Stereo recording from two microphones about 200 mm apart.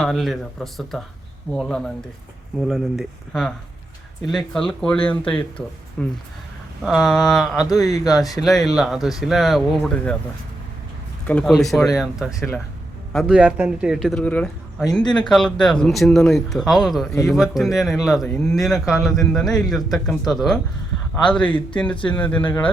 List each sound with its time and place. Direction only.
0.0 s speech: centre (ahead or behind)
7.8 s speech: 15° left (ahead or behind)
8.0 s speech: centre (ahead or behind)
11.3 s speech: 5° left (ahead or behind)
15.0 s speech: 20° left (ahead or behind)
15.3 s speech: 5° left (ahead or behind)